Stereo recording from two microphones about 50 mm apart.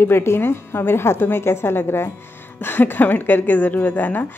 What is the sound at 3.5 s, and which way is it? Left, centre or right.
Speech, left.